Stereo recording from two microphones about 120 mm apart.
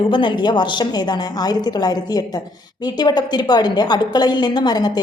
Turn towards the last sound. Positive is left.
turn(degrees=35)  # may be behind; listen again after turning